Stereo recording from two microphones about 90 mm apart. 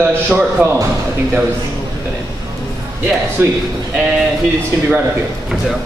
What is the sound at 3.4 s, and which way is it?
Speech, 30° right (ahead or behind).